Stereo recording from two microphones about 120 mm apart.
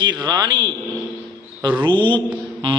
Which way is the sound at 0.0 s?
35° right (ahead or behind).